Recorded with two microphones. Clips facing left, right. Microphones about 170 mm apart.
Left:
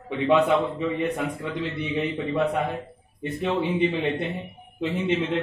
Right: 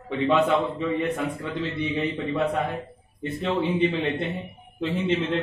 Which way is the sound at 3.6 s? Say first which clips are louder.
Right 1 dB; 15° left (ahead or behind).